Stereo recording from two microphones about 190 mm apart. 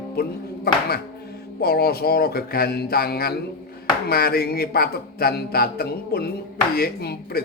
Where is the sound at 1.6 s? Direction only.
55° left (ahead or behind).